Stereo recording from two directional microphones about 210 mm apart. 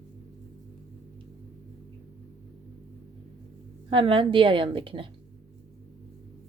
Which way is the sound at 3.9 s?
25° right (ahead or behind).